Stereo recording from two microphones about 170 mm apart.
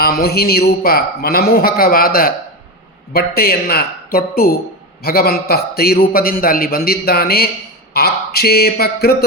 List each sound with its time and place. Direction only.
0.0 s a man's voice: 65° left (ahead or behind)